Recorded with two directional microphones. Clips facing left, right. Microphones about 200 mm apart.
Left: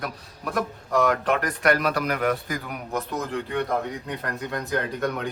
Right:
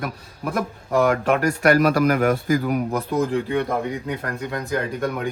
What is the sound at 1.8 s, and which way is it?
A man's voice, 45° right (ahead or behind).